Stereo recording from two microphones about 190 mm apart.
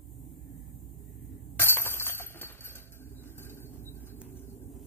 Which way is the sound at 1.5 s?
10° left (ahead or behind).